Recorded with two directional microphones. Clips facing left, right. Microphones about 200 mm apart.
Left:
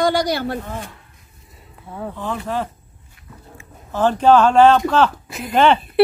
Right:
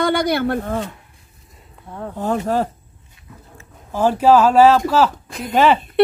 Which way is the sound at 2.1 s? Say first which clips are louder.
Right 6 dB; 45° right (ahead or behind).